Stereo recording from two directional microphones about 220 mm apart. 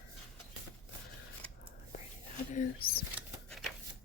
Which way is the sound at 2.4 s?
35° left (ahead or behind).